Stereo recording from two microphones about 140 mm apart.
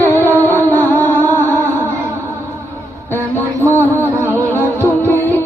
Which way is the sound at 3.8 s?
15° left (ahead or behind).